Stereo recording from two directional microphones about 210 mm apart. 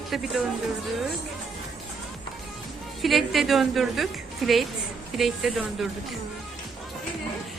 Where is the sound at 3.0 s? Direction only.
Centre (ahead or behind).